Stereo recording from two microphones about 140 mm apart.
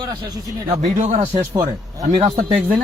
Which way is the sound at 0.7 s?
55° right (ahead or behind).